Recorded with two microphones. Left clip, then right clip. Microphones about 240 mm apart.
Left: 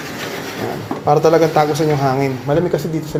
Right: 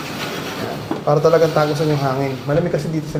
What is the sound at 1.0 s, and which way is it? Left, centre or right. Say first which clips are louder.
Speech: left 2 dB; left.